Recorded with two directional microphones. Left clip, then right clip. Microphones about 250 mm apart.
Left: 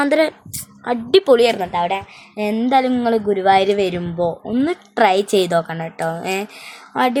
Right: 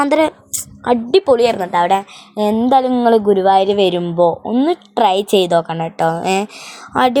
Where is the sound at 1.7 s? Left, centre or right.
Right.